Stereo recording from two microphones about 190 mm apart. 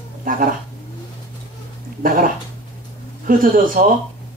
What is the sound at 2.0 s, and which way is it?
Speech, 50° right (ahead or behind).